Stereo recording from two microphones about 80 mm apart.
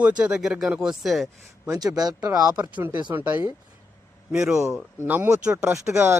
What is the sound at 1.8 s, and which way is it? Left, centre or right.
Speech, right.